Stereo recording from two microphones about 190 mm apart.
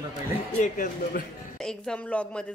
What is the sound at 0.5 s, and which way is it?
Speech, 40° left (ahead or behind).